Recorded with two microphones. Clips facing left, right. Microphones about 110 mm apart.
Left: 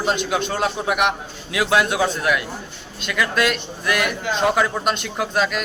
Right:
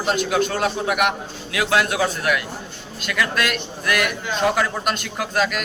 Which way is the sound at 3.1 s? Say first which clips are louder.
Left 2 dB; 20° left (ahead or behind).